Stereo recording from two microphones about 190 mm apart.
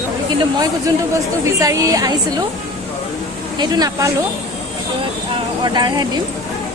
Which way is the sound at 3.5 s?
20° right (ahead or behind).